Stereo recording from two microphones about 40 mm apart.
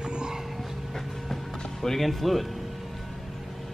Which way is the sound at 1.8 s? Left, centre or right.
Centre.